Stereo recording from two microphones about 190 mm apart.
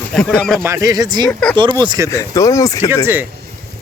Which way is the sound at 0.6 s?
15° right (ahead or behind).